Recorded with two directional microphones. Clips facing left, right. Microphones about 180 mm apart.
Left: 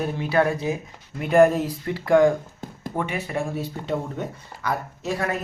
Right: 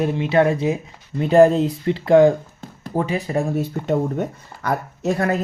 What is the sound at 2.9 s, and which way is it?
Speech, 35° right (ahead or behind).